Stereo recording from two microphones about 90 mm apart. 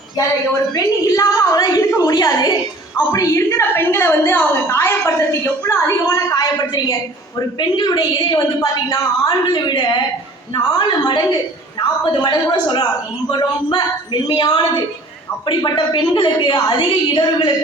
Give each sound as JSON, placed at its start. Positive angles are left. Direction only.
{"t": 0.7, "sound": "a woman's voice", "side_deg": 40}